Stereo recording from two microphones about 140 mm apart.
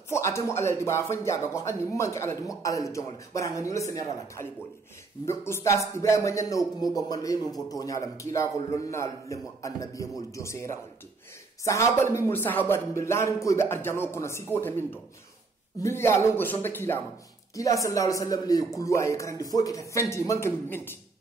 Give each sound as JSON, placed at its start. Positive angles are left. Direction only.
{"t": 0.1, "sound": "a man's voice", "side_deg": 20}